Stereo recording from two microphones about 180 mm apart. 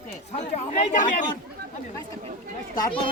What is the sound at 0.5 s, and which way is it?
Speech, 40° left (ahead or behind).